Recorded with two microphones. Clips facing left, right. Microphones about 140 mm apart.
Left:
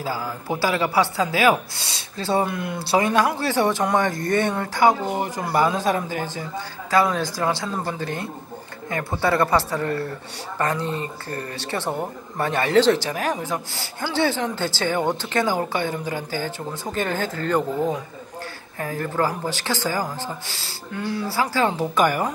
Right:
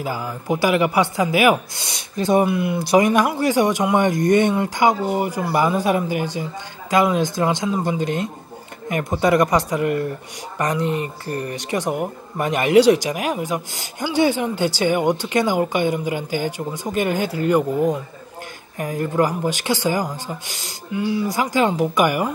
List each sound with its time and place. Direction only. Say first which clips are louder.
0.0 s speech: right 1 dB; 15° right (ahead or behind)
18.8 s speech: right 4 dB; 15° right (ahead or behind)
21.0 s speech: right 5 dB; 5° right (ahead or behind)
21.3 s speech: even; 15° right (ahead or behind)